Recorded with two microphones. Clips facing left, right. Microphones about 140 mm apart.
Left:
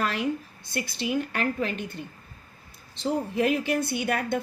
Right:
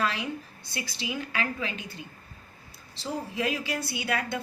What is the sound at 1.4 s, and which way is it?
Speech, 55° left (ahead or behind).